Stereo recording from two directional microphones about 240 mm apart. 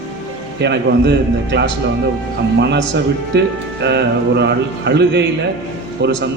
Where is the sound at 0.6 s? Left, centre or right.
Right.